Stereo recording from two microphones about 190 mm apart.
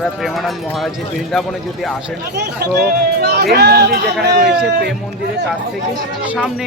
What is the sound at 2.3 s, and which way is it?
Speech, 60° right (ahead or behind).